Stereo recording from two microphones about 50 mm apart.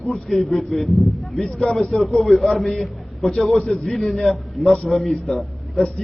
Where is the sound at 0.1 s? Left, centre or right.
Centre.